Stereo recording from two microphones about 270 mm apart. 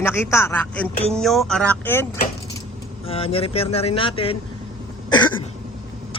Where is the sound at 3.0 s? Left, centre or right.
Left.